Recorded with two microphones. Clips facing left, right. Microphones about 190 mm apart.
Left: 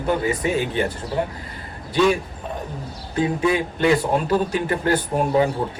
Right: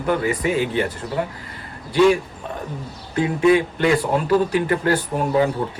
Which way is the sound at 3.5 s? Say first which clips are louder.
Right 2 dB; 25° left (ahead or behind).